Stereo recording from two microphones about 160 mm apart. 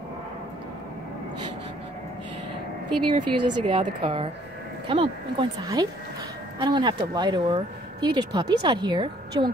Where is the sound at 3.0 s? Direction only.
30° right (ahead or behind).